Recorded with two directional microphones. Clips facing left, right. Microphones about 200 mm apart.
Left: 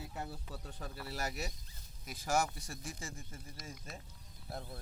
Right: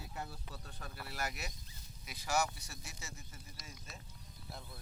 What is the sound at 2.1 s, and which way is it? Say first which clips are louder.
Speech: left 2 dB; 50° left (ahead or behind).